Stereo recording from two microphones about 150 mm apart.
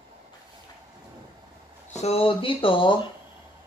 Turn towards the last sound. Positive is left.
turn(degrees=35)  # may be behind; listen again after turning